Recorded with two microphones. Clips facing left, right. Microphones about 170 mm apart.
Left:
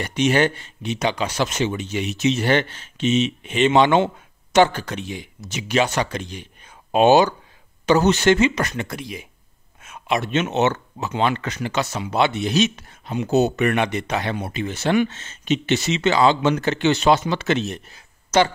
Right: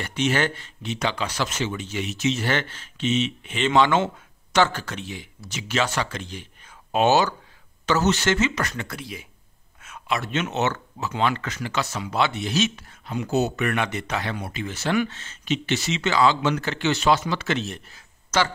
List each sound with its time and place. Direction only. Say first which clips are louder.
0.0 s speech: left 5 dB; 15° left (ahead or behind)